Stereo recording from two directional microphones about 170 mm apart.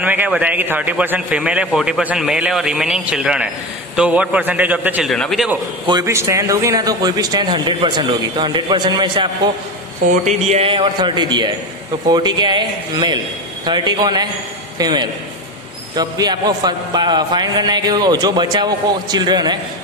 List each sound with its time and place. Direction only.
0.0 s a man's voice: 10° right (ahead or behind)
5.1 s a man's voice: centre (ahead or behind)
5.9 s a man's voice: 20° right (ahead or behind)
10.2 s a man's voice: 40° right (ahead or behind)